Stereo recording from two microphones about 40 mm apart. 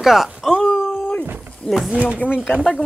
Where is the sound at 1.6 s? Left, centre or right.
Left.